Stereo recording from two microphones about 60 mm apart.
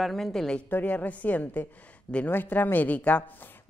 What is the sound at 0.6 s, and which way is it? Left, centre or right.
A woman's voice, left.